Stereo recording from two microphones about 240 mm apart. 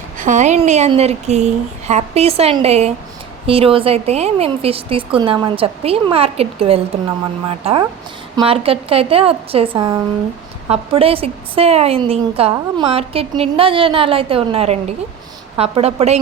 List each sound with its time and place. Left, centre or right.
0.2 s a woman's voice: right